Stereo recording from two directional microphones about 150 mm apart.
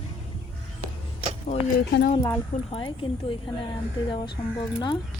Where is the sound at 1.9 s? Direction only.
90° left.